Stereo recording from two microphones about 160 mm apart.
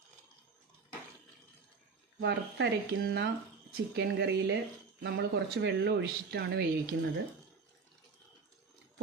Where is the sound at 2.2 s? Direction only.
90° right.